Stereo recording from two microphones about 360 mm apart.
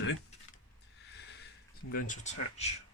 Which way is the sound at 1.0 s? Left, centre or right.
Left.